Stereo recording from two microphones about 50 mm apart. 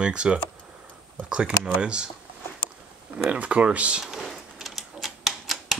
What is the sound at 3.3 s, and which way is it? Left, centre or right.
Speech, right.